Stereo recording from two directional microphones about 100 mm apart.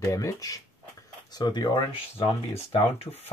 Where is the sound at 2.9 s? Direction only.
90° left.